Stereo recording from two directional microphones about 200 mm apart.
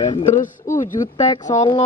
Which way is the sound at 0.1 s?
35° left (ahead or behind).